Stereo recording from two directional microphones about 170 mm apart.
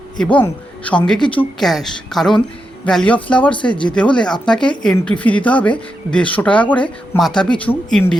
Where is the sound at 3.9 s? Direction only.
5° left (ahead or behind).